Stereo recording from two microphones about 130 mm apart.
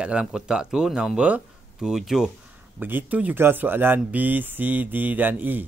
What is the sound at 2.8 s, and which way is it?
Speech, 15° right (ahead or behind).